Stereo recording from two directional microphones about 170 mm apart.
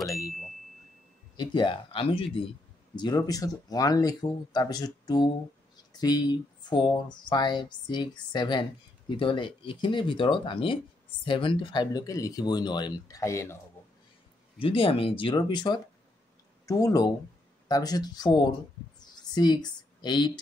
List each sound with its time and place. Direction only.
1.3 s speech: 30° left (ahead or behind)
14.6 s speech: 30° left (ahead or behind)
18.9 s a sound: 25° left (ahead or behind)